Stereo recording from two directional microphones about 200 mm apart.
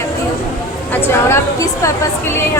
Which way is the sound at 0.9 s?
15° left (ahead or behind).